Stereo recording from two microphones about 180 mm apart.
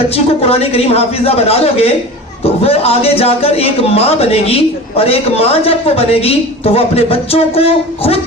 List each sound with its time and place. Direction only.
0.4 s a man's voice: 35° left (ahead or behind)